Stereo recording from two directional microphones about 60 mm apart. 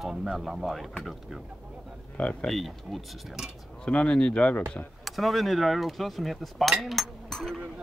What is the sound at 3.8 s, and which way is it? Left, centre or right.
Speech, centre.